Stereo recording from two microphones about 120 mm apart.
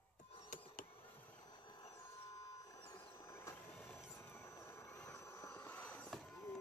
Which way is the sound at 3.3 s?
25° left (ahead or behind).